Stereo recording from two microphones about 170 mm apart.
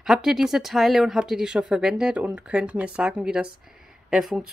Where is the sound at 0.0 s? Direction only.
Centre (ahead or behind).